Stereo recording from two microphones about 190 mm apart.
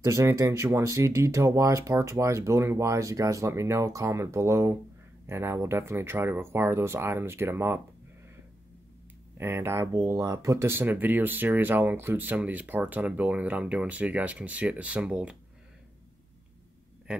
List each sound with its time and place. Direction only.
0.0 s speech: 15° right (ahead or behind)
9.4 s speech: 15° right (ahead or behind)